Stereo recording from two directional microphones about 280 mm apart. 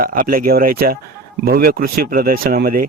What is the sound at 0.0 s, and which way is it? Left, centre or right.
Speech, right.